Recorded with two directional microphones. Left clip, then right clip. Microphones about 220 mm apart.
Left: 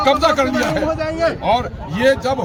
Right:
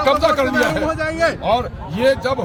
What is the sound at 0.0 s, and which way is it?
Speech, centre (ahead or behind).